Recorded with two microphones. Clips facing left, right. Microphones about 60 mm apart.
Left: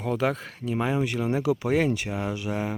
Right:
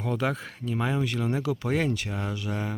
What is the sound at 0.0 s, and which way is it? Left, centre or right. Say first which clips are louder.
Speech: left 2 dB; centre.